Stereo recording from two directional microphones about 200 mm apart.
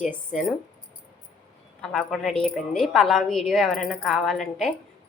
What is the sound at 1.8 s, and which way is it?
A woman's voice, centre (ahead or behind).